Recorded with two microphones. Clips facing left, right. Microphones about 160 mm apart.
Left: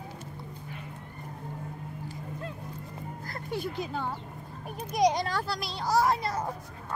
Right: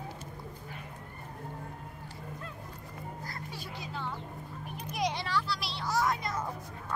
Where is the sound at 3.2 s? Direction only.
55° left (ahead or behind).